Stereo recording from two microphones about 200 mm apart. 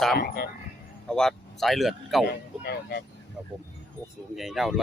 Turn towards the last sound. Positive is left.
turn(degrees=0)  # may be behind; listen again after turning